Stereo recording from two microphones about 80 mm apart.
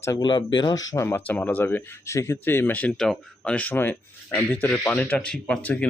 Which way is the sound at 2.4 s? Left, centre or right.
Left.